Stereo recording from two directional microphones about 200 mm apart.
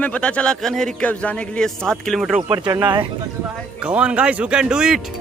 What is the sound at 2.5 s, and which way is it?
Speech, 20° right (ahead or behind).